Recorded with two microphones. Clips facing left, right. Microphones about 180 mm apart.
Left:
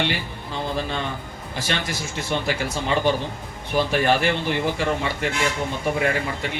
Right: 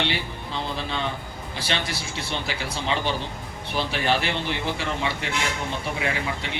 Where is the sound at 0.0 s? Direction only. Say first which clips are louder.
Left 2 dB; 45° left (ahead or behind).